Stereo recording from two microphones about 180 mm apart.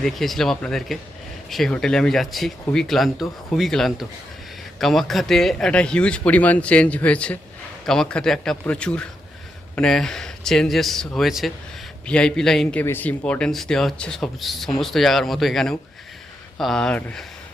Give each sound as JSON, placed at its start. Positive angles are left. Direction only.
{"t": 0.0, "sound": "speech", "side_deg": 0}